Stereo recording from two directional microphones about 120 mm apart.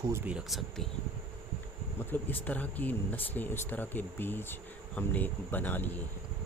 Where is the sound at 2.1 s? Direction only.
15° left (ahead or behind).